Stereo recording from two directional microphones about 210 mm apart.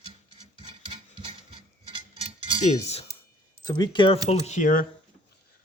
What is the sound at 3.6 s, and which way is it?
Speech, 20° left (ahead or behind).